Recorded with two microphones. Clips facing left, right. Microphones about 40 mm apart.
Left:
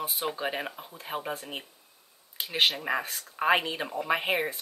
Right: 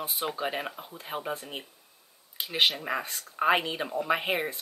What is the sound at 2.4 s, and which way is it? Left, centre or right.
Speech, centre.